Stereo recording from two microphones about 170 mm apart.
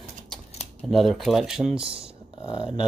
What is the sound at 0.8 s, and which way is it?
Speech, centre (ahead or behind).